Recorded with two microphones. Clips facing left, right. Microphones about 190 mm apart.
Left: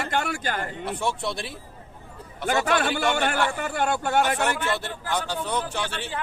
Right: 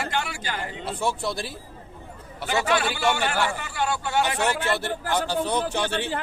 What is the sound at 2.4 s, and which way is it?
A man's voice, 50° left (ahead or behind).